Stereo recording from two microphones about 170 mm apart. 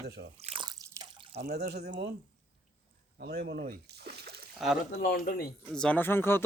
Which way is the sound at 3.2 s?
65° right (ahead or behind).